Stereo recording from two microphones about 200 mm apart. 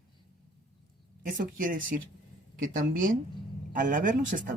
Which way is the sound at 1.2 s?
45° right (ahead or behind).